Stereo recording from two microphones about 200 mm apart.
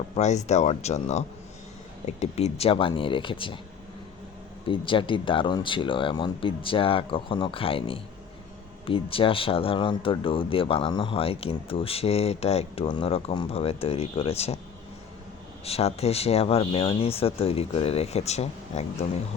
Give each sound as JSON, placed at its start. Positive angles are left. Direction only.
{"t": 0.2, "sound": "speech", "side_deg": 35}
{"t": 4.6, "sound": "speech", "side_deg": 25}
{"t": 15.6, "sound": "speech", "side_deg": 30}